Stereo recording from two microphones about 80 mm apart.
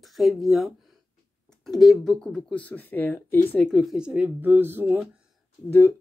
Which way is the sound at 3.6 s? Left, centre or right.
Centre.